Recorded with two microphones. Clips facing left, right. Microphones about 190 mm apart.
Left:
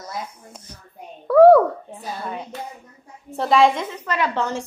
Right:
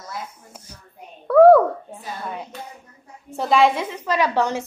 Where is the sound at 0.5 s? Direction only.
5° right (ahead or behind).